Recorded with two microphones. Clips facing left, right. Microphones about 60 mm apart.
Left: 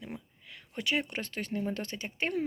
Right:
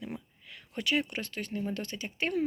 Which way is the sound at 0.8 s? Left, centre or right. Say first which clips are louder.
Right 1 dB; left.